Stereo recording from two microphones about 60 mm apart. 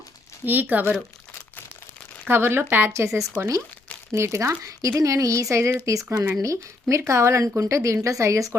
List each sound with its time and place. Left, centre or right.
0.4 s speech: right
2.2 s speech: right
2.9 s speech: right